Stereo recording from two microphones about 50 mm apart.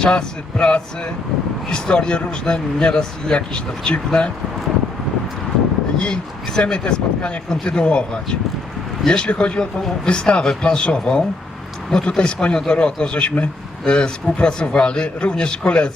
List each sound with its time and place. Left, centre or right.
0.0 s a man's voice: centre
6.0 s a man's voice: centre